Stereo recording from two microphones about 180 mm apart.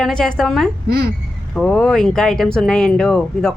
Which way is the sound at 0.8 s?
60° right (ahead or behind).